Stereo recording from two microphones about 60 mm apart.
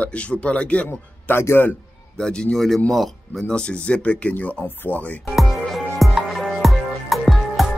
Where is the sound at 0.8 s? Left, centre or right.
Left.